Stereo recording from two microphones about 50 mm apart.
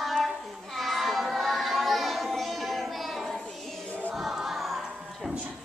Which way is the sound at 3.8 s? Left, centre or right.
Left.